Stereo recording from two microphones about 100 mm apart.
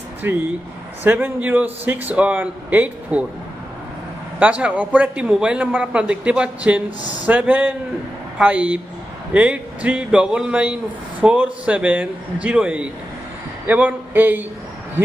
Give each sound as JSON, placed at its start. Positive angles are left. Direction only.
{"t": 0.2, "sound": "a man's voice", "side_deg": -20}
{"t": 4.4, "sound": "a man's voice", "side_deg": -15}